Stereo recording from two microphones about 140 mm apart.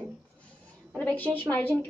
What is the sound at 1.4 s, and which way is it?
Speech, 10° left (ahead or behind).